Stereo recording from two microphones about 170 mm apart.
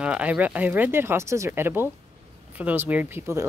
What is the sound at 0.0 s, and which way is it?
Speech, 5° right (ahead or behind).